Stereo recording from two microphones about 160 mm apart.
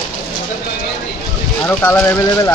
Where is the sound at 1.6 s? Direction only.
10° left (ahead or behind).